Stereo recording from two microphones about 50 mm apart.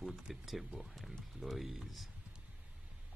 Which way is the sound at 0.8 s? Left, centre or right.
Centre.